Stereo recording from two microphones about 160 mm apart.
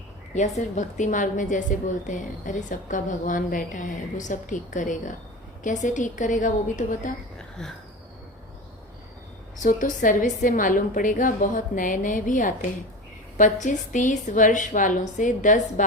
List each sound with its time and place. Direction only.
0.3 s a woman's voice: 50° left (ahead or behind)
7.6 s a sound: 5° left (ahead or behind)
9.6 s a woman's voice: 55° left (ahead or behind)